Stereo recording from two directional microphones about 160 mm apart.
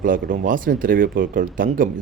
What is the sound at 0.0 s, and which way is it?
Speech, 60° right (ahead or behind).